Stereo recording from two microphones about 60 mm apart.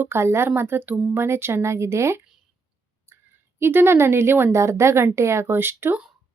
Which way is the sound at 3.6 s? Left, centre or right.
Right.